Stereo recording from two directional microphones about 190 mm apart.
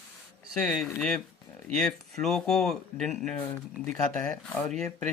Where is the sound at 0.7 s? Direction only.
5° left (ahead or behind).